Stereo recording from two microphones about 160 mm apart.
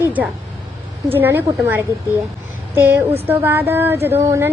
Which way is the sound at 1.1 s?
15° right (ahead or behind).